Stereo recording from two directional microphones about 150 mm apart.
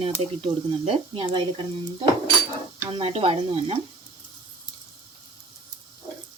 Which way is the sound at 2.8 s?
40° right (ahead or behind).